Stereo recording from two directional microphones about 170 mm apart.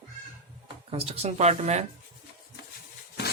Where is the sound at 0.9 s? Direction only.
35° right (ahead or behind).